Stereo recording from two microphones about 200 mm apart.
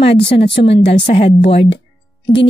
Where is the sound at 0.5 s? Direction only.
30° left (ahead or behind).